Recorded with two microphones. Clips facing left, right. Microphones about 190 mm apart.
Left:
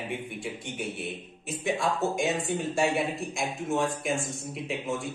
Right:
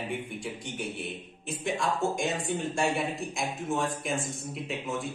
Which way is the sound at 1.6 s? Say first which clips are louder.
Left 1 dB; centre (ahead or behind).